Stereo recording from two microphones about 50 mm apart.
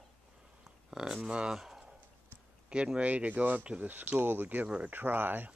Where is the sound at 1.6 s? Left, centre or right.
Centre.